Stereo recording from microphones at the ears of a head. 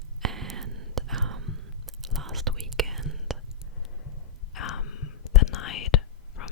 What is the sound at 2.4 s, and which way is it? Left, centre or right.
Whispering, right.